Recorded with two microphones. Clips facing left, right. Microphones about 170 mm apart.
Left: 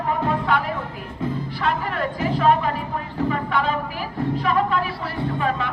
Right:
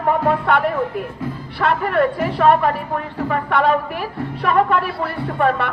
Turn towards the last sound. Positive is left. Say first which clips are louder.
# right 5 dB
turn(degrees=-60)  # may be behind; listen again after turning